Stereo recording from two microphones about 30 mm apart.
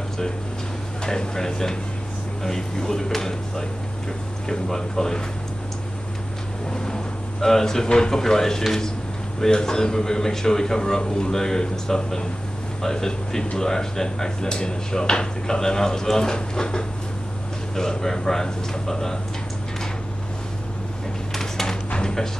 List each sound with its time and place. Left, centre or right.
1.0 s speech: centre
7.4 s speech: centre
7.8 s speech: left
11.0 s speech: left
21.4 s a sound: centre